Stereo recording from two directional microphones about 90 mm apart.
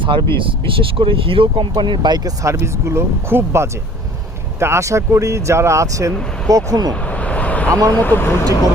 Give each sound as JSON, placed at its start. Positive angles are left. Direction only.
{"t": 0.0, "sound": "speech", "side_deg": -65}
{"t": 0.3, "sound": "speech", "side_deg": -75}
{"t": 1.7, "sound": "speech", "side_deg": -55}
{"t": 7.1, "sound": "vehicle", "side_deg": 15}
{"t": 7.7, "sound": "speech", "side_deg": -35}
{"t": 7.9, "sound": "speech", "side_deg": 20}